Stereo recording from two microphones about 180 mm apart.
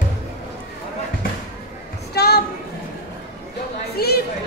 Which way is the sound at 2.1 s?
60° left (ahead or behind).